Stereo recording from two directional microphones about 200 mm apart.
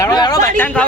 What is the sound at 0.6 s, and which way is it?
Speech, 5° left (ahead or behind).